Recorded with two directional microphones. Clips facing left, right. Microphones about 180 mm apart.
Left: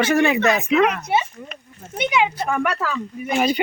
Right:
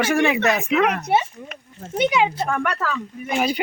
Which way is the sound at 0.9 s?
55° right (ahead or behind).